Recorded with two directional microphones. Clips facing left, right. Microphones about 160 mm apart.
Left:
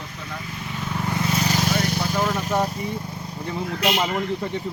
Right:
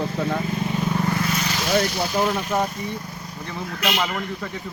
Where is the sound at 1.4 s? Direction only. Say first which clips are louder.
Left 3 dB; 40° left (ahead or behind).